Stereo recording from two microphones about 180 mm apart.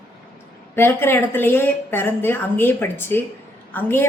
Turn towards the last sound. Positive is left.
turn(degrees=10)  # may be behind; listen again after turning